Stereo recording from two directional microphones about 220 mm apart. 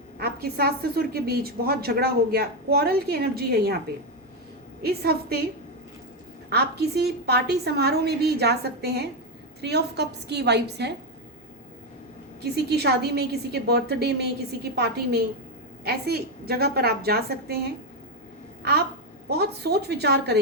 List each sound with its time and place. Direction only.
0.2 s a woman's voice: 45° right (ahead or behind)
4.8 s a woman's voice: 45° right (ahead or behind)
6.5 s a woman's voice: 45° right (ahead or behind)
12.6 s a woman's voice: 50° right (ahead or behind)